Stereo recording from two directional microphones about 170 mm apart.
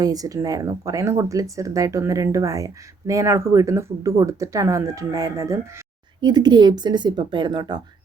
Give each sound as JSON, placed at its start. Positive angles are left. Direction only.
{"t": 0.0, "sound": "speech", "side_deg": -20}